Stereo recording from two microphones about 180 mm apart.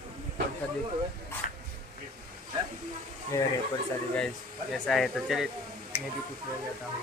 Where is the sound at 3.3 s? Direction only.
15° left (ahead or behind).